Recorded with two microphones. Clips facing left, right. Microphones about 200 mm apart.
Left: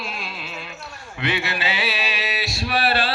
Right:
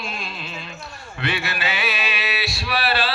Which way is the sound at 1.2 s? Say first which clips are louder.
Left 1 dB; 20° left (ahead or behind).